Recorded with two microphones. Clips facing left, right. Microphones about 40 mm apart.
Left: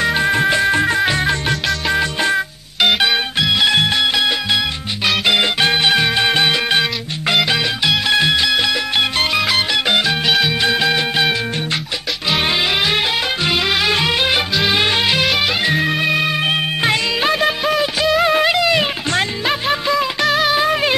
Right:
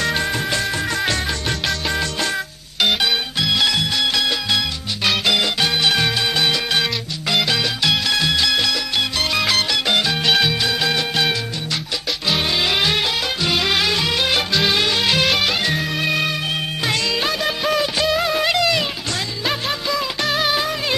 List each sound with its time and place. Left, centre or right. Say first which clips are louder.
0.0 s music: left 6 dB; centre
3.7 s music: left 5 dB; left
4.0 s music: left 3 dB; left
13.4 s music: even; centre
13.8 s music: left 3 dB; left
14.5 s music: left 1 dB; centre
14.8 s music: left 3 dB; left
15.0 s music: left 1 dB; centre
17.6 s music: left 2 dB; centre
18.2 s music: left 5 dB; left
18.5 s music: left 3 dB; centre
20.2 s music: left 3 dB; centre
20.6 s music: left 7 dB; left